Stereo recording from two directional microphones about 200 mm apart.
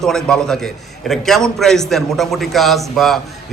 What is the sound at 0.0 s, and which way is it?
A man's voice, 5° left (ahead or behind).